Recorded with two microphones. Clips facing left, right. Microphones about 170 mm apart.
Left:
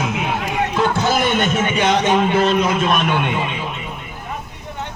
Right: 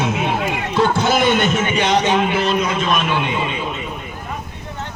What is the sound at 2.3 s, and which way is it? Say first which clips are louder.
A man's voice: left 2 dB; 55° left (ahead or behind).